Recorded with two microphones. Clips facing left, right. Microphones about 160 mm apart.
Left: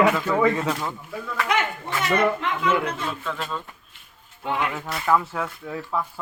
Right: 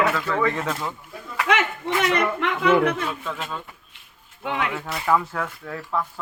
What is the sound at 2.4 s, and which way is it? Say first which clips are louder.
Speech: right 4 dB; 75° right (ahead or behind).